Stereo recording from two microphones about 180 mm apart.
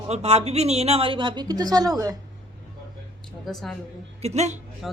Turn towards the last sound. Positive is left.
turn(degrees=-40)  # may be behind; listen again after turning